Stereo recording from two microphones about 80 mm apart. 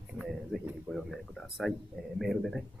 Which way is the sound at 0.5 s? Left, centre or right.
Centre.